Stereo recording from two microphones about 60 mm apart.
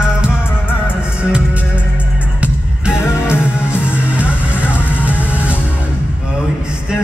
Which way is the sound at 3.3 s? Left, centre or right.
Left.